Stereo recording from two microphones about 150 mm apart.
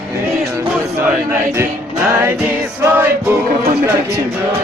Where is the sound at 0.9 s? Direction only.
20° right (ahead or behind).